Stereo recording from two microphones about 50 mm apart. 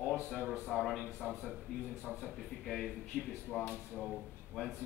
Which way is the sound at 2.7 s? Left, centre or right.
Centre.